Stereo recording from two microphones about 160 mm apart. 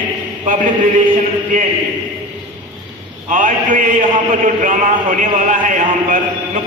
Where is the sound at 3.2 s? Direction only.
55° right (ahead or behind).